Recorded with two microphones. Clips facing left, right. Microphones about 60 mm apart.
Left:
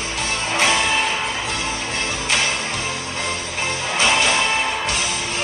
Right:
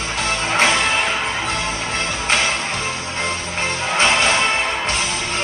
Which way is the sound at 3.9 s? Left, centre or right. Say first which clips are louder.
Right 2 dB; right.